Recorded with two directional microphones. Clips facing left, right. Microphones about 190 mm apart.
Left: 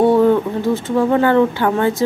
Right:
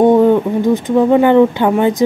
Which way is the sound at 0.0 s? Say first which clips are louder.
Right 3 dB; 15° right (ahead or behind).